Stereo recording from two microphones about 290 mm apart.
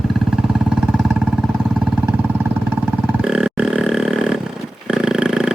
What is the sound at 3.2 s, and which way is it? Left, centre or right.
Burping, centre.